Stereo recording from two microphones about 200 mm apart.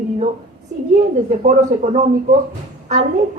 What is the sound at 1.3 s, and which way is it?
A woman's voice, 40° right (ahead or behind).